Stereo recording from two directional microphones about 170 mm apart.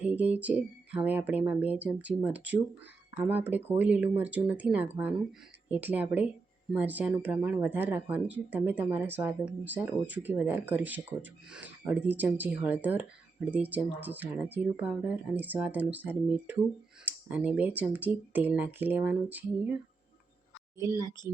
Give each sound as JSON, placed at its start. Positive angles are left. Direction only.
{"t": 0.0, "sound": "speech", "side_deg": -10}
{"t": 20.7, "sound": "speech", "side_deg": -20}